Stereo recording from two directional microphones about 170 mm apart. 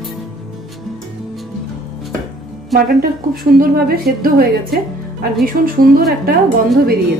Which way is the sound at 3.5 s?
60° right (ahead or behind).